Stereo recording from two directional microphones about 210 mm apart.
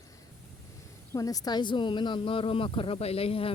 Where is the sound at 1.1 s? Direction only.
15° left (ahead or behind).